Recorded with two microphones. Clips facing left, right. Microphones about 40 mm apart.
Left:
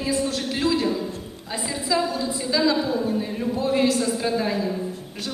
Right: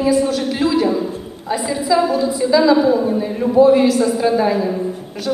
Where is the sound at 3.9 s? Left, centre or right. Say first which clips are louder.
Right 8 dB; centre.